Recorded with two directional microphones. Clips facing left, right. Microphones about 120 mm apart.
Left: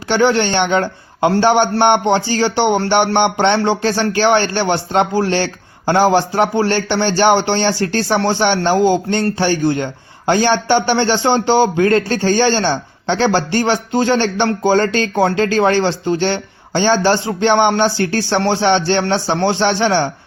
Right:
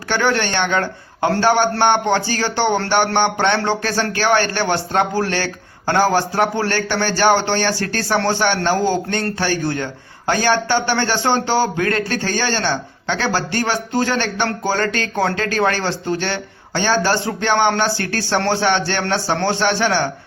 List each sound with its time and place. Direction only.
0.1 s a man's voice: 20° left (ahead or behind)